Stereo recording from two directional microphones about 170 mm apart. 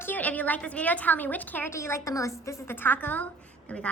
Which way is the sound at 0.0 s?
10° left (ahead or behind).